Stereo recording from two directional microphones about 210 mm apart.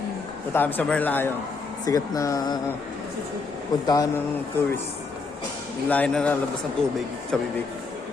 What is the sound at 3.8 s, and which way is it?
Speech, 15° left (ahead or behind).